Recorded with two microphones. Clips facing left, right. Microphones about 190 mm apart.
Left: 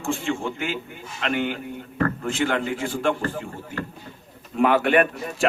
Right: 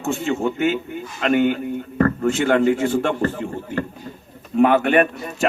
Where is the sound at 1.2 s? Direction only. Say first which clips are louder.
Right 7 dB; 45° right (ahead or behind).